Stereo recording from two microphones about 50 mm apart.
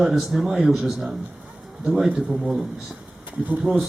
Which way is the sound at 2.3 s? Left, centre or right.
Centre.